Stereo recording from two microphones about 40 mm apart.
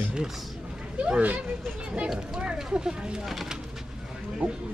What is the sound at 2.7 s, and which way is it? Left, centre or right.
Speech, right.